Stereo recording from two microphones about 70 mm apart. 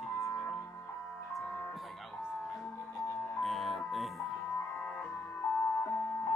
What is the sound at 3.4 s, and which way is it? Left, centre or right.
Music, centre.